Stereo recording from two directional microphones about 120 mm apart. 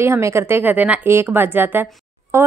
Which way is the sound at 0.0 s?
20° right (ahead or behind).